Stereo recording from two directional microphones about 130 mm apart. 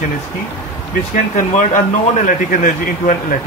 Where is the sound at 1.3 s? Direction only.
70° left (ahead or behind); by 3.3 s 90° left.